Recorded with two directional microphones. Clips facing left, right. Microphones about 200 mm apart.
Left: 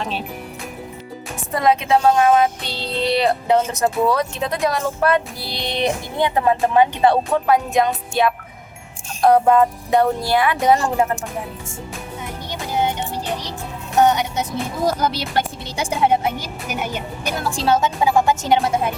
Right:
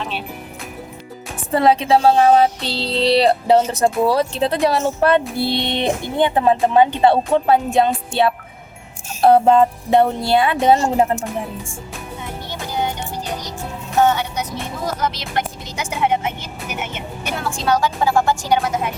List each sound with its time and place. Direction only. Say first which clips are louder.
1.5 s a sound: right 2 dB; 30° right (ahead or behind)
4.0 s speech: right 3 dB; 30° right (ahead or behind)
12.5 s music: left 2 dB; 20° left (ahead or behind)
14.9 s speech: left 2 dB; 35° left (ahead or behind)